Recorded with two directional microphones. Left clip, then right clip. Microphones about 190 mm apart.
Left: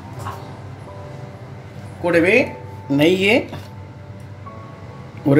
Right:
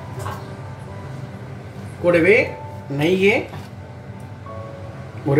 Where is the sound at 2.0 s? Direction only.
60° left (ahead or behind).